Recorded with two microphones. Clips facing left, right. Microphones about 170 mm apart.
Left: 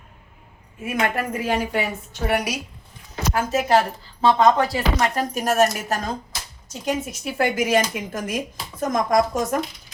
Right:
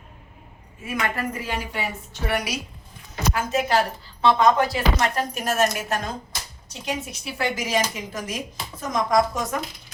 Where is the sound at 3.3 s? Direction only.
45° left (ahead or behind).